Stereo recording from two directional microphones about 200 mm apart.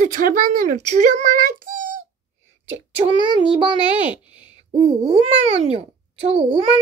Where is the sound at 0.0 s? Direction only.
45° right (ahead or behind).